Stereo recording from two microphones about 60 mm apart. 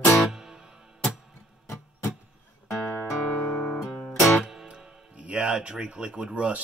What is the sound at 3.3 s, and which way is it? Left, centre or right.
Guitar, left.